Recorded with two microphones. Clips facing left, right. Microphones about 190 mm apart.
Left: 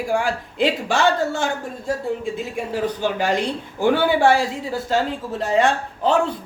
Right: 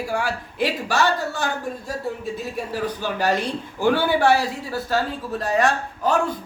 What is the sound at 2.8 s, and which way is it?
A woman's voice, 20° left (ahead or behind).